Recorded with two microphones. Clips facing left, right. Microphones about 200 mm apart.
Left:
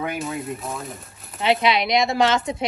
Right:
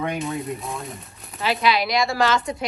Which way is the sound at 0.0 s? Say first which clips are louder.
Right 1 dB; centre (ahead or behind).